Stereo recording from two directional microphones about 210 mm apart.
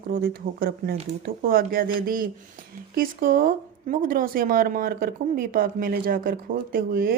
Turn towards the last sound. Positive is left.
turn(degrees=-45)  # may be behind; listen again after turning